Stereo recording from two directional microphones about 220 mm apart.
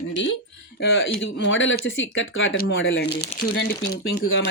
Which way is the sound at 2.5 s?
50° left (ahead or behind).